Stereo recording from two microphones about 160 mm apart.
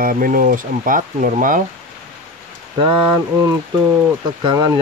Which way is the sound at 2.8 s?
35° right (ahead or behind).